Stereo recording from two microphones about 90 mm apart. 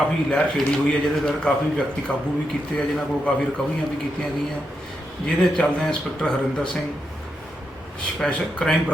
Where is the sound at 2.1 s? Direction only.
15° left (ahead or behind).